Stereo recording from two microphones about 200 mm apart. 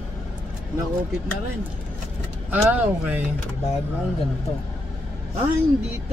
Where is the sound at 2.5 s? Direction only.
10° right (ahead or behind).